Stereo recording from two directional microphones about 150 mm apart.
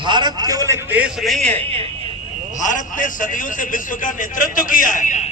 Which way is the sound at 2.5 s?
60° left (ahead or behind).